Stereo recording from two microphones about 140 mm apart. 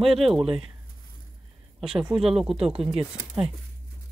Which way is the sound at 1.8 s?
5° right (ahead or behind).